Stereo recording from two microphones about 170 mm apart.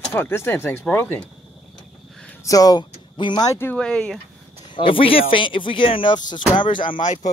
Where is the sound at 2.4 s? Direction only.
20° left (ahead or behind); by 4.1 s 5° left (ahead or behind).